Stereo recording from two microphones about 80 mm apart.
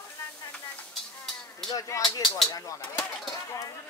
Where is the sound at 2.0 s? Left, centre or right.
Centre.